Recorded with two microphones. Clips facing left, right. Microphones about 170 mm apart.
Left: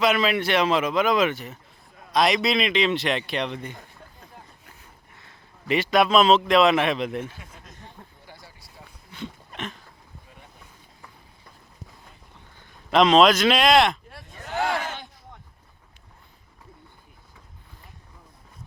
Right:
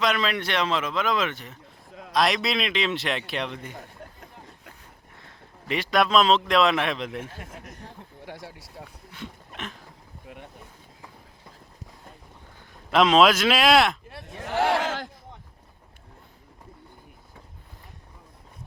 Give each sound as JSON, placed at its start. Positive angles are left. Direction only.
{"t": 0.0, "sound": "a man's voice", "side_deg": 5}
{"t": 5.6, "sound": "a man's voice", "side_deg": 0}
{"t": 7.3, "sound": "speech", "side_deg": -55}
{"t": 9.1, "sound": "a sound", "side_deg": 0}
{"t": 12.9, "sound": "a man's voice", "side_deg": -5}
{"t": 14.3, "sound": "a sound", "side_deg": -80}
{"t": 14.8, "sound": "speech", "side_deg": -90}